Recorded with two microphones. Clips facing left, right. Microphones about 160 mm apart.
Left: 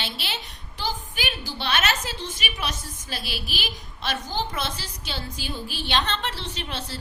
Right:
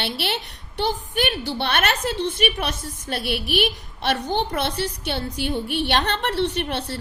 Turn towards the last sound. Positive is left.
turn(degrees=-65)  # may be behind; listen again after turning